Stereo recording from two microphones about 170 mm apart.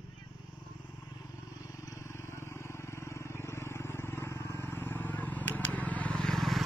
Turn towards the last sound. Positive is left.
turn(degrees=0)  # may be behind; listen again after turning